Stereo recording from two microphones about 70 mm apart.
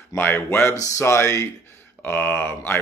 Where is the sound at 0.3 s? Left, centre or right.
Left.